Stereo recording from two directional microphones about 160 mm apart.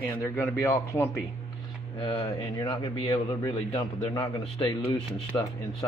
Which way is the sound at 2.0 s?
35° left (ahead or behind).